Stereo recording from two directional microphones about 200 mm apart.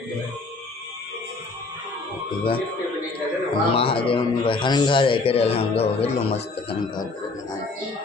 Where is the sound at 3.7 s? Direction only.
25° left (ahead or behind).